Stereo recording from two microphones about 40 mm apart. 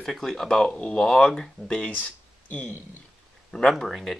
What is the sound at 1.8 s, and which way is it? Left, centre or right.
Speech, left.